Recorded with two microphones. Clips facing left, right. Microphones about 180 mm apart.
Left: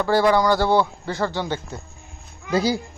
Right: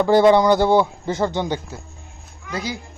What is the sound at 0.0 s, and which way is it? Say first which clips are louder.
A man's voice: right 4 dB; 20° right (ahead or behind).